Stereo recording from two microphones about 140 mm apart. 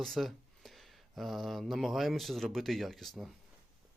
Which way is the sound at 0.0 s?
Centre (ahead or behind).